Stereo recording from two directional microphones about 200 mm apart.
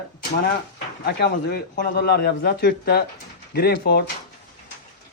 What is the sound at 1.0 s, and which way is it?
A man's voice, 55° left (ahead or behind).